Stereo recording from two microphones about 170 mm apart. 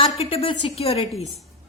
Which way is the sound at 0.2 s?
35° left (ahead or behind).